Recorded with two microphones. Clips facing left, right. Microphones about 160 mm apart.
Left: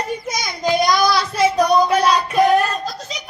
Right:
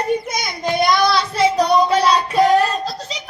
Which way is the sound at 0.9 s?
25° right (ahead or behind).